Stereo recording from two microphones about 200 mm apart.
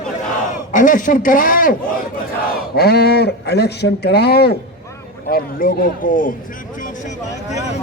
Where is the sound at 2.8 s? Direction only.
55° left (ahead or behind).